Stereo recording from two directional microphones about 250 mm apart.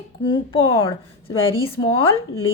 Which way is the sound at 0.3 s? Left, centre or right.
Left.